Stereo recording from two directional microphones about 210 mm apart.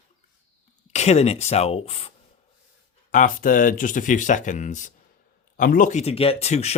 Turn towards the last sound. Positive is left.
turn(degrees=30)  # may be behind; listen again after turning